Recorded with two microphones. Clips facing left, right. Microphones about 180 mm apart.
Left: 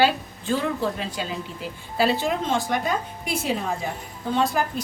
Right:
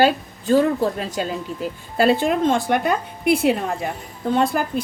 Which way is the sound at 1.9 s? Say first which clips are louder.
Right 5 dB; 55° right (ahead or behind).